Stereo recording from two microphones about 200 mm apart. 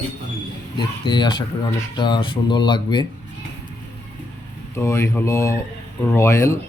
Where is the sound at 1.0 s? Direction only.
20° left (ahead or behind).